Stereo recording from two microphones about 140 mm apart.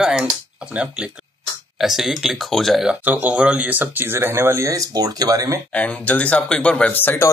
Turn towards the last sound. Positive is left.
turn(degrees=15)  # may be behind; listen again after turning